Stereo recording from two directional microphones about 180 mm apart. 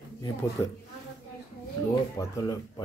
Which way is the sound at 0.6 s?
20° left (ahead or behind).